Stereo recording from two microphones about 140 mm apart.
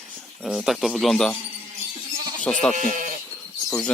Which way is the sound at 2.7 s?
65° right (ahead or behind).